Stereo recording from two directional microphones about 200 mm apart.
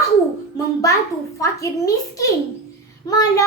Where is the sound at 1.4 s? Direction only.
15° left (ahead or behind).